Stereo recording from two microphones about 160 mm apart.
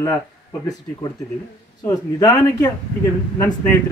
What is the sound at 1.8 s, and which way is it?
Speech, 25° left (ahead or behind).